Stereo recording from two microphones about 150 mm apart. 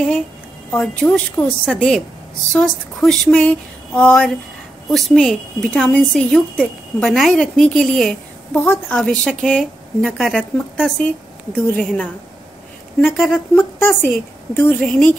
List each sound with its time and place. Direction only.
0.7 s a woman's voice: 10° left (ahead or behind)
8.5 s a woman's voice: 15° left (ahead or behind)
13.6 s speech: 15° left (ahead or behind)